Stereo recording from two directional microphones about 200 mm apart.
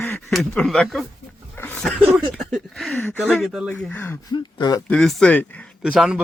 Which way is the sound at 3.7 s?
10° left (ahead or behind).